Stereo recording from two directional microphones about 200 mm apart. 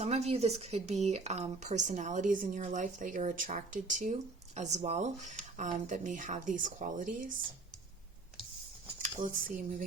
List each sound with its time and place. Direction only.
0.0 s speech: 35° right (ahead or behind)
9.0 s speech: 40° right (ahead or behind)